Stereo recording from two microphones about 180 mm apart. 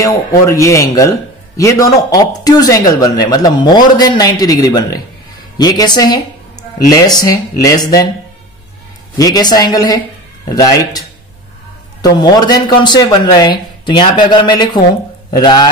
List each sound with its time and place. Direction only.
0.0 s speech: 20° left (ahead or behind)
9.1 s speech: 20° left (ahead or behind)